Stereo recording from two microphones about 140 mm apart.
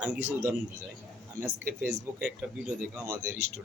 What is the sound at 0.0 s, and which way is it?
Speech, 15° right (ahead or behind).